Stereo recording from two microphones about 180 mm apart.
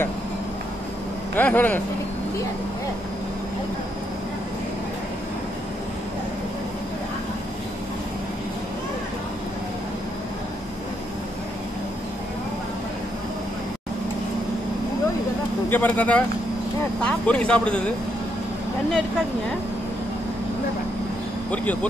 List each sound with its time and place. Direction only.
1.3 s speech: 10° left (ahead or behind)
15.7 s speech: 10° left (ahead or behind)